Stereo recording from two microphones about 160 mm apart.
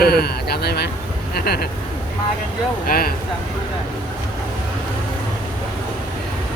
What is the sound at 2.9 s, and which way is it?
Speech, 65° left (ahead or behind).